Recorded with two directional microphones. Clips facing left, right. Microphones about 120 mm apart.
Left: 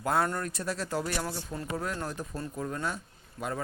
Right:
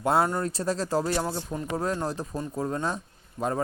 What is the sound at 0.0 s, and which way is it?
Speech, 25° right (ahead or behind).